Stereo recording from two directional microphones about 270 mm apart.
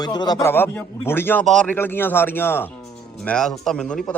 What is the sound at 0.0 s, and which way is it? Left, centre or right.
A man's voice, centre.